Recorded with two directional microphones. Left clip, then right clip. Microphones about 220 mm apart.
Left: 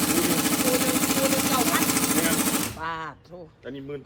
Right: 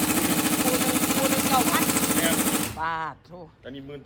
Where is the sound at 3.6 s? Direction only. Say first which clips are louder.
Left 4 dB; 25° left (ahead or behind).